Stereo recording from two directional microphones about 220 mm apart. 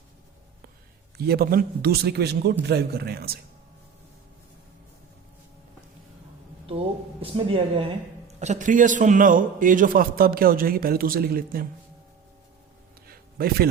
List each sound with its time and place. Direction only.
1.2 s a man's voice: 45° right (ahead or behind)
6.7 s a man's voice: 25° right (ahead or behind); by 11.7 s 40° right (ahead or behind)
13.1 s a sound: 45° right (ahead or behind)